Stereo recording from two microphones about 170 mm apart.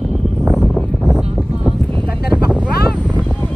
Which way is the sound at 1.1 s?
5° right (ahead or behind).